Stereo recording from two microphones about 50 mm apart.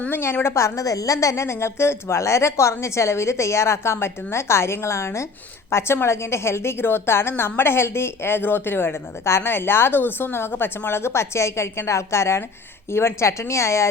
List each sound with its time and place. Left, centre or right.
0.1 s a woman's voice: left
5.7 s a woman's voice: left